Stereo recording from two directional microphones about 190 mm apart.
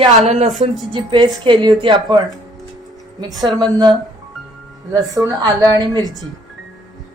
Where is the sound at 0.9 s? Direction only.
25° right (ahead or behind).